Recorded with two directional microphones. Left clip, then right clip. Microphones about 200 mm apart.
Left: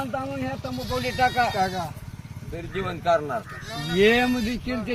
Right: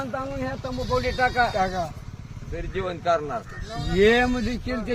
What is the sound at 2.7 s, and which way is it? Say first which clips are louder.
Speech: left 1 dB; 55° left (ahead or behind).